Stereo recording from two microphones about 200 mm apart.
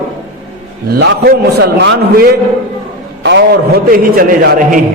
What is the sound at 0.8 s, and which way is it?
A man's voice, 55° right (ahead or behind).